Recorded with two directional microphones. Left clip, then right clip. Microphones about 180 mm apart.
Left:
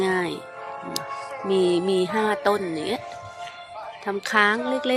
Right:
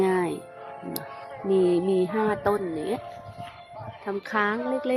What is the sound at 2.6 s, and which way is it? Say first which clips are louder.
Speech: left 2 dB; 35° left (ahead or behind).